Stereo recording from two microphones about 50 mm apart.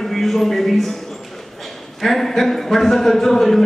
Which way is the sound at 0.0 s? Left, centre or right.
Centre.